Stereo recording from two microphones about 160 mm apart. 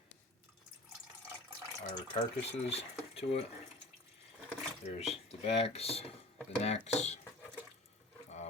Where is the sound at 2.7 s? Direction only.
40° left (ahead or behind).